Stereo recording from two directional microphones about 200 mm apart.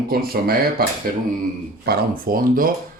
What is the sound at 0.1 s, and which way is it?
Speech, 50° right (ahead or behind).